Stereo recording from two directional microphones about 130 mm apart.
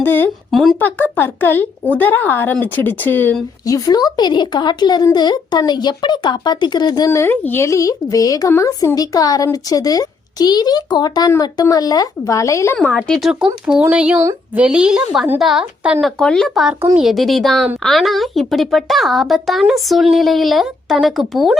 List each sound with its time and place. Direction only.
0.0 s speech: 15° left (ahead or behind)
0.5 s a woman's voice: centre (ahead or behind)
0.8 s speech: 15° left (ahead or behind)
3.7 s speech: 30° left (ahead or behind)
12.7 s a woman's voice: 10° left (ahead or behind)